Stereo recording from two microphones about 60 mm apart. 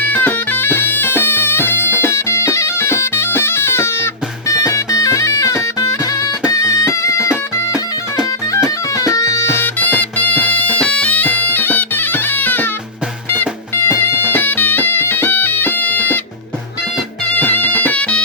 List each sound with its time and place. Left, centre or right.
0.1 s bagpipes: left
2.0 s bagpipes: left
6.5 s music: left
8.6 s music: left
9.8 s bagpipes: left
13.3 s music: left
17.3 s music: left